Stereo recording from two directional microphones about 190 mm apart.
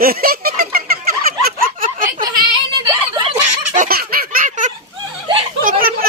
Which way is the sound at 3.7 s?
45° right (ahead or behind).